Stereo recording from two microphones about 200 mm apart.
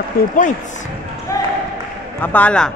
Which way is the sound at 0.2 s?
45° left (ahead or behind).